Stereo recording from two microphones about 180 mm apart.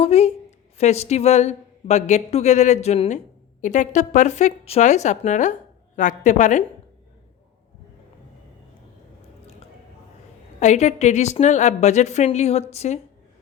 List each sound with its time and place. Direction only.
0.0 s a woman's voice: 35° left (ahead or behind)
10.6 s a woman's voice: 40° left (ahead or behind)